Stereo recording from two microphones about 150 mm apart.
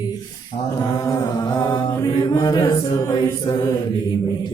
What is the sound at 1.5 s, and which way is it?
Mantra, 30° left (ahead or behind).